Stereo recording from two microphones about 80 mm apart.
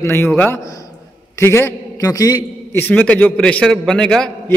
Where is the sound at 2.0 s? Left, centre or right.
Left.